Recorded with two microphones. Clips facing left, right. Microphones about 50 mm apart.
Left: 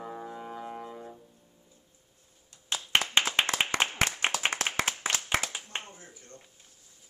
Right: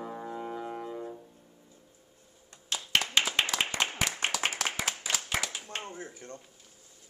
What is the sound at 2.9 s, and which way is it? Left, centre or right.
Clapping, left.